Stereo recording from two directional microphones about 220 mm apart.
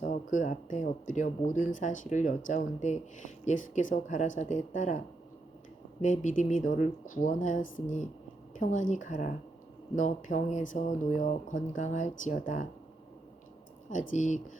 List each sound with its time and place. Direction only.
0.0 s speech: 35° left (ahead or behind)
6.0 s a woman's voice: 35° left (ahead or behind)
14.2 s speech: 35° left (ahead or behind)